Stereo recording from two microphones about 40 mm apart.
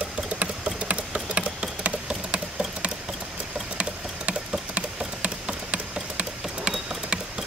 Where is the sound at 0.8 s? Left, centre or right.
Right.